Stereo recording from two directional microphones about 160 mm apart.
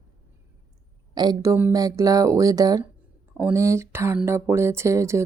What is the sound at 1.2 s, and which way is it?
Speech, 25° right (ahead or behind).